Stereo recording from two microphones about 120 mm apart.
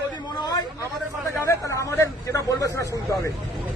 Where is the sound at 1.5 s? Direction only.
25° left (ahead or behind).